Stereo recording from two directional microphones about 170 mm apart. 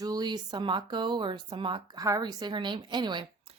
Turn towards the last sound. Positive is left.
turn(degrees=-25)  # may be behind; listen again after turning